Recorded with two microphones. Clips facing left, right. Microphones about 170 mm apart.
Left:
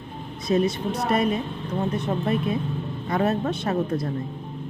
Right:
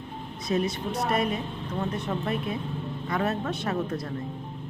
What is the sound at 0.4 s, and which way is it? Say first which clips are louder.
A woman's voice: left 5 dB; 25° left (ahead or behind).